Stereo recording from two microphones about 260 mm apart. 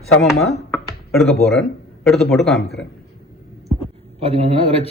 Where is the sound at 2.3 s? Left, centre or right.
Centre.